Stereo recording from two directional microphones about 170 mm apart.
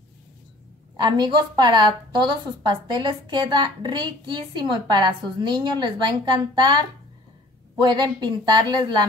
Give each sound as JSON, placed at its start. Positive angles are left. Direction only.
{"t": 0.9, "sound": "a woman's voice", "side_deg": -25}